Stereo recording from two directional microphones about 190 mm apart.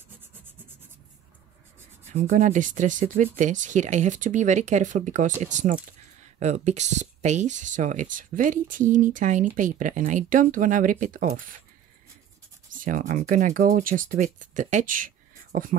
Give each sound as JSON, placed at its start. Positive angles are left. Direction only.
{"t": 2.1, "sound": "speech", "side_deg": -40}
{"t": 12.7, "sound": "speech", "side_deg": -45}